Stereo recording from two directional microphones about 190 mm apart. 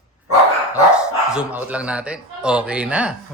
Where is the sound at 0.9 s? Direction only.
5° right (ahead or behind).